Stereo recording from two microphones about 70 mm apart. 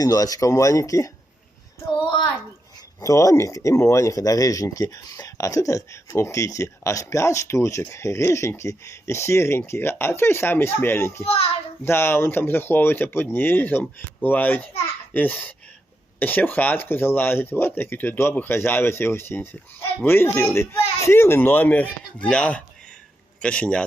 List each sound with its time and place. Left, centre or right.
0.0 s speech: left
3.0 s a man's voice: left; by 23.8 s centre